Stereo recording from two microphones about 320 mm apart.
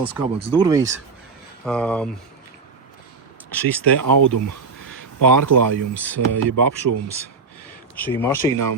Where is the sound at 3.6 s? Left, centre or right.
Centre.